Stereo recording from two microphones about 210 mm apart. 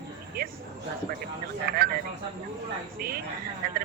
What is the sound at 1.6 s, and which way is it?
Speech, 45° right (ahead or behind).